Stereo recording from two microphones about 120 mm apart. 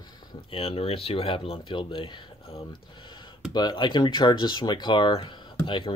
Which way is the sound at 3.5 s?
35° left (ahead or behind).